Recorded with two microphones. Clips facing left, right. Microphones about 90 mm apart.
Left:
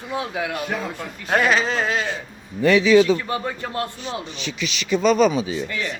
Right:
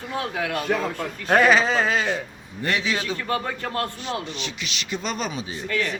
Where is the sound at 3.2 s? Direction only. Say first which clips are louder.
Even; 15° left (ahead or behind).